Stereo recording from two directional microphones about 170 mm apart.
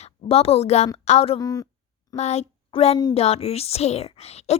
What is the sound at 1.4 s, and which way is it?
Speech, 20° left (ahead or behind).